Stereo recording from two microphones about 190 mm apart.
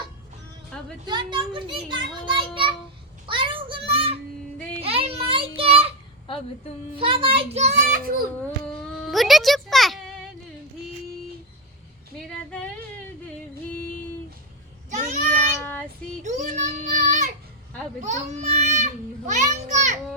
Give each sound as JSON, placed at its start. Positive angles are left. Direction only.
{"t": 1.0, "sound": "a child's voice", "side_deg": -25}
{"t": 3.2, "sound": "child singing", "side_deg": -25}
{"t": 4.8, "sound": "a sound", "side_deg": -30}
{"t": 6.9, "sound": "a child's voice", "side_deg": -25}
{"t": 9.0, "sound": "music", "side_deg": 0}
{"t": 14.8, "sound": "child singing", "side_deg": -40}
{"t": 15.3, "sound": "child singing", "side_deg": 10}
{"t": 16.2, "sound": "child singing", "side_deg": -40}
{"t": 18.0, "sound": "speech", "side_deg": -35}
{"t": 19.3, "sound": "a sound", "side_deg": -40}